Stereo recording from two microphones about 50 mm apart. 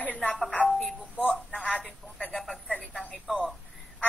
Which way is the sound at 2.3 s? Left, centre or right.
Centre.